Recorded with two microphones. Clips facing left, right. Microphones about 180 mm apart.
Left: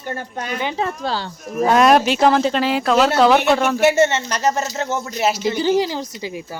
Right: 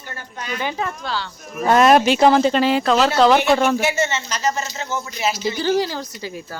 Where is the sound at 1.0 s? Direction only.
40° left (ahead or behind).